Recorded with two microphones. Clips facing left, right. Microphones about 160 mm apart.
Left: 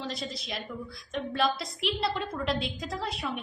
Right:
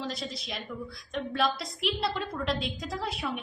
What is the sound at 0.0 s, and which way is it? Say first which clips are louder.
A woman's voice: even; centre (ahead or behind).